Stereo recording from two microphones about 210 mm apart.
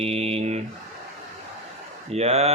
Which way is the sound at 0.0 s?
30° right (ahead or behind).